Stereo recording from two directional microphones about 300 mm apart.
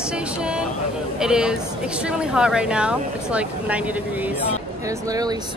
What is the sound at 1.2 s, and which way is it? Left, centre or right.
Speech, centre.